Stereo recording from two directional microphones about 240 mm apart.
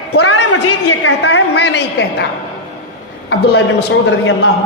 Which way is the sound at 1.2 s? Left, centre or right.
Left.